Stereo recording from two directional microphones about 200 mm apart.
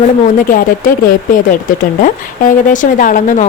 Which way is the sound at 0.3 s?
45° left (ahead or behind).